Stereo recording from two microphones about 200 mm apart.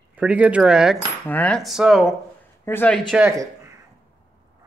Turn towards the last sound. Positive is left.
turn(degrees=-15)  # may be behind; listen again after turning